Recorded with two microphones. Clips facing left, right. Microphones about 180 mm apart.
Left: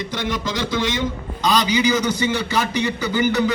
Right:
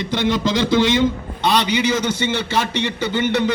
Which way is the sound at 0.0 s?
30° right (ahead or behind).